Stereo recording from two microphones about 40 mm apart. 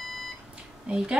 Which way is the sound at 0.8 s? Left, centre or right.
Right.